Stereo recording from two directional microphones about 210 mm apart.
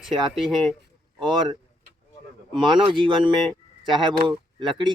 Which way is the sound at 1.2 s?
20° right (ahead or behind).